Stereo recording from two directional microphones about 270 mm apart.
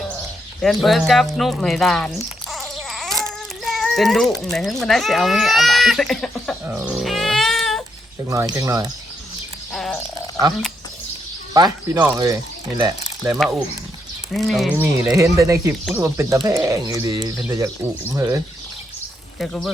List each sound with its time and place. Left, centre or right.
0.6 s speech: centre
2.5 s baby cry: centre
3.6 s speech: centre
6.7 s baby cry: centre
8.3 s speech: centre
9.7 s frog: centre
11.5 s speech: centre
19.4 s speech: centre